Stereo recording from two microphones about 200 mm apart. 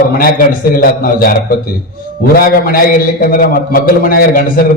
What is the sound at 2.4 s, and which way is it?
A man's voice, 45° left (ahead or behind).